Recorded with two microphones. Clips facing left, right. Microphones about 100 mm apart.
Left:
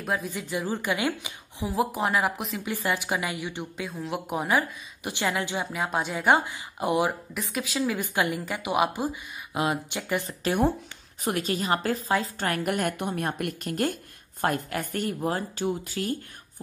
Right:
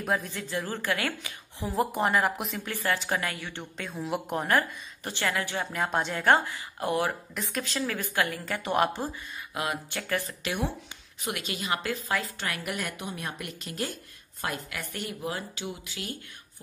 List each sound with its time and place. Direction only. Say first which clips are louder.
0.0 s a woman's voice: even; centre (ahead or behind)
0.3 s a woman's voice: left 3 dB; 15° left (ahead or behind)
1.7 s speech: even; centre (ahead or behind)
2.6 s a woman's voice: left 2 dB; 15° left (ahead or behind)
5.7 s a woman's voice: even; 5° left (ahead or behind)
7.3 s a woman's voice: left 3 dB; 5° left (ahead or behind)
9.5 s speech: left 5 dB; 20° left (ahead or behind)
10.4 s a woman's voice: left 7 dB; 45° left (ahead or behind)